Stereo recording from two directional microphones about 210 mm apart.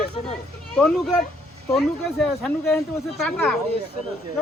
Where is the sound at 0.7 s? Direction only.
Centre (ahead or behind).